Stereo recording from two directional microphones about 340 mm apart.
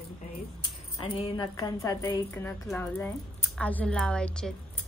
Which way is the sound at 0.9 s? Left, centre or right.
Centre.